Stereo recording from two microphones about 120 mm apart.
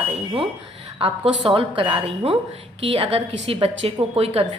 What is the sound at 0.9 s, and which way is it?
A woman's voice, 50° right (ahead or behind).